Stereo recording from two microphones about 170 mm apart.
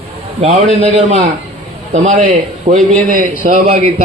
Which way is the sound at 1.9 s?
45° right (ahead or behind).